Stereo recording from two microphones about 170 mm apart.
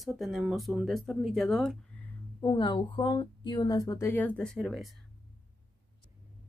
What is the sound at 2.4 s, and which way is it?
A woman's voice, 25° left (ahead or behind).